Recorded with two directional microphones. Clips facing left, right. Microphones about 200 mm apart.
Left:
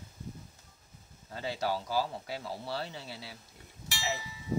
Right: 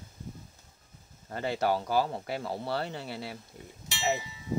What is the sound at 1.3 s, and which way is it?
Speech, 55° right (ahead or behind).